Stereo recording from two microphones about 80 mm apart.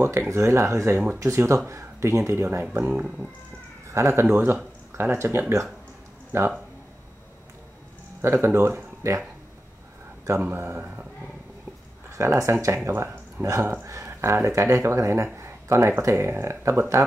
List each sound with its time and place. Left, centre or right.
0.0 s speech: right
2.8 s speech: centre
3.9 s speech: right
8.2 s speech: right
10.4 s speech: right
12.2 s speech: right
15.3 s a sound: right
16.0 s speech: right